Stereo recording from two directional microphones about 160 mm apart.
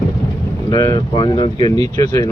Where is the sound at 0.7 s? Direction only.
25° left (ahead or behind).